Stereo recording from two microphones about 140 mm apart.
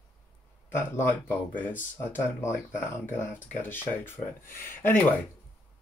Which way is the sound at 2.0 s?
15° left (ahead or behind).